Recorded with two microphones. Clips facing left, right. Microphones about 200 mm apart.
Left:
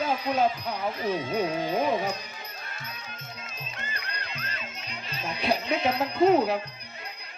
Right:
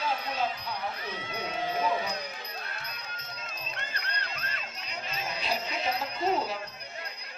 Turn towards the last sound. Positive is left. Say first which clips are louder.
# left 8 dB
turn(degrees=60)  # may be behind; listen again after turning